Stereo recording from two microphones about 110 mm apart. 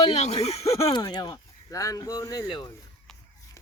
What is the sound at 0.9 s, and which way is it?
Speech, 40° left (ahead or behind).